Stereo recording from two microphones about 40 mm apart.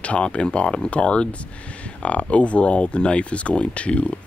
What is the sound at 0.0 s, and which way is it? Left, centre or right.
Speech, left.